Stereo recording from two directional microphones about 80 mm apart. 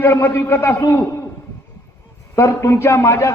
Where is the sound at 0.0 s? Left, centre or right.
Left.